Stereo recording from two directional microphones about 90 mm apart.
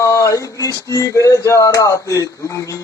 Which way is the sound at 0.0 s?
40° left (ahead or behind).